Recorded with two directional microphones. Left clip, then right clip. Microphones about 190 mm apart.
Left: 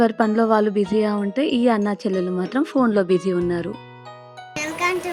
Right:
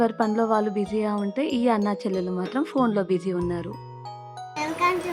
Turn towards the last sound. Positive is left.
turn(degrees=-10)  # may be behind; listen again after turning